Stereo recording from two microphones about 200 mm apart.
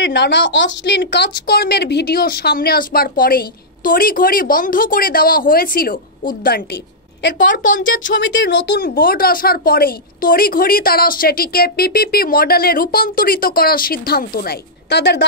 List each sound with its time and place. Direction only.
0.0 s a woman's voice: 60° left (ahead or behind)